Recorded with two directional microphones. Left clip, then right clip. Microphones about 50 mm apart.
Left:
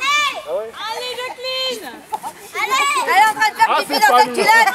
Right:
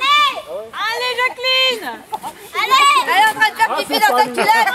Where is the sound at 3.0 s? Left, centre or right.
Centre.